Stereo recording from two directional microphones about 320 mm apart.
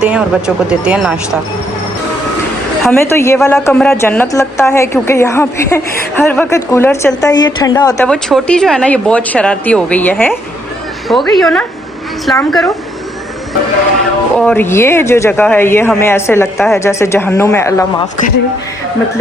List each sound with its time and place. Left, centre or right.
0.0 s speech: centre
2.8 s a woman's voice: centre
14.3 s a woman's voice: centre